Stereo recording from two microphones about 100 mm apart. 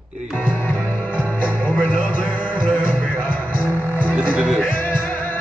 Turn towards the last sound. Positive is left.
turn(degrees=20)  # may be behind; listen again after turning